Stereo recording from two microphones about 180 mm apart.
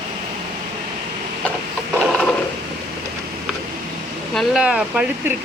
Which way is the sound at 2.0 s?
Centre (ahead or behind).